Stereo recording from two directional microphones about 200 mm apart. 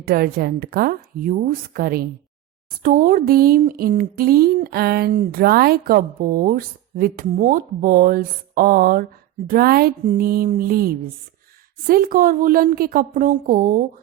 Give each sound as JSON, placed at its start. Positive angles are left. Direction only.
{"t": 0.0, "sound": "speech", "side_deg": -50}